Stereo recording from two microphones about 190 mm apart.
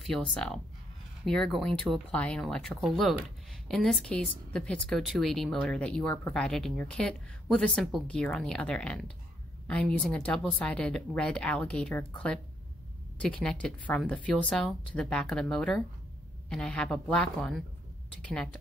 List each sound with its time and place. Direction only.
0.0 s speech: centre (ahead or behind)